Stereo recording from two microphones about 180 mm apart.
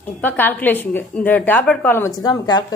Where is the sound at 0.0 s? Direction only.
10° left (ahead or behind).